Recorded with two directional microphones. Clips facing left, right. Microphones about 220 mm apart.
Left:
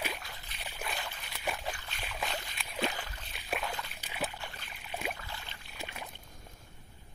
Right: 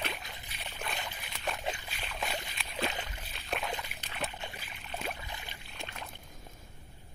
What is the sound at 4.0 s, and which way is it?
Boat, 10° left (ahead or behind).